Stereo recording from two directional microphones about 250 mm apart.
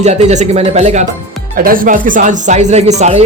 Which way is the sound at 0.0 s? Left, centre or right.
Right.